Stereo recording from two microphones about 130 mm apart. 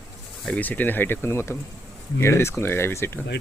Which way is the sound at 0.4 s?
10° left (ahead or behind).